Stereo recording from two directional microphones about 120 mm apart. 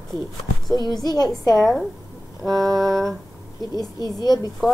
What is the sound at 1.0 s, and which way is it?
Speech, 35° left (ahead or behind).